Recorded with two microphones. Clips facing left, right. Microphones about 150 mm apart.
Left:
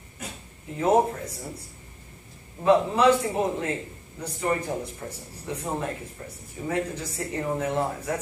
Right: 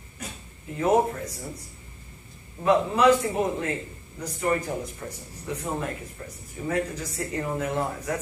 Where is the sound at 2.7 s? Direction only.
30° left (ahead or behind).